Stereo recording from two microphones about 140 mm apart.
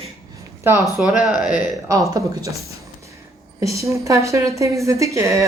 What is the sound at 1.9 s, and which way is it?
A woman's voice, 25° right (ahead or behind).